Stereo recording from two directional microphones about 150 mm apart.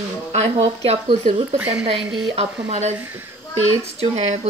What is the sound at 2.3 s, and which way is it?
Speech, 45° right (ahead or behind).